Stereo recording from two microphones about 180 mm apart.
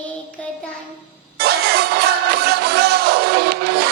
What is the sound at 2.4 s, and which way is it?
Music, 65° right (ahead or behind).